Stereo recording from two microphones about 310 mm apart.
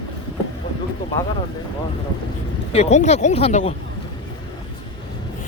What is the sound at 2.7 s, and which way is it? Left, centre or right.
Speech, left.